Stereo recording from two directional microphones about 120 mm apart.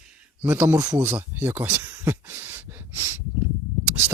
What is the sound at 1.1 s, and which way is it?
Speech, 15° right (ahead or behind).